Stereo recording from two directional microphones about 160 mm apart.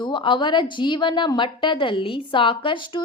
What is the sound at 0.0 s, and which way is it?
A woman's voice, 30° left (ahead or behind).